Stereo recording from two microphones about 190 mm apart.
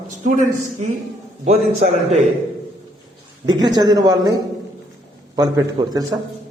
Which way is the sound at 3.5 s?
20° right (ahead or behind).